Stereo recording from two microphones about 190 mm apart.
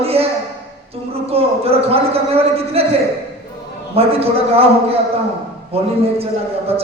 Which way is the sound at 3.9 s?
30° right (ahead or behind).